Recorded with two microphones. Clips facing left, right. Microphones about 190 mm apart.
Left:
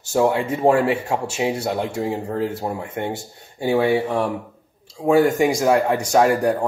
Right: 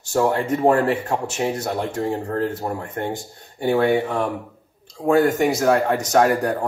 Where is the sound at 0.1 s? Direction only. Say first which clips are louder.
Left 1 dB; 10° left (ahead or behind).